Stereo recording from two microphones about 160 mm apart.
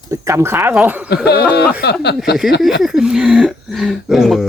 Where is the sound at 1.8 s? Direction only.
90° left.